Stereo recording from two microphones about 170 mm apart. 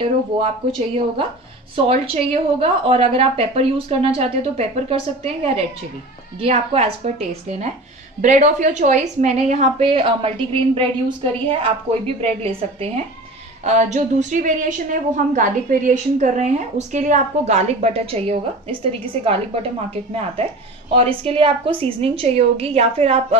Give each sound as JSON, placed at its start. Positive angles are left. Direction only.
{"t": 0.4, "sound": "a woman's voice", "side_deg": -35}